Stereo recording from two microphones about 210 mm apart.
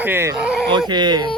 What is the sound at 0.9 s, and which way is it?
Speech, 20° right (ahead or behind).